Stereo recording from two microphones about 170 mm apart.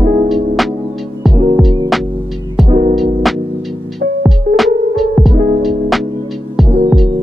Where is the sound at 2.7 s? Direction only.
40° right (ahead or behind).